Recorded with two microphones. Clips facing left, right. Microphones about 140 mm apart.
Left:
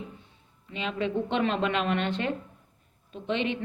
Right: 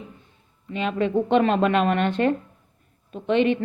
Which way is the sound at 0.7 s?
50° right (ahead or behind).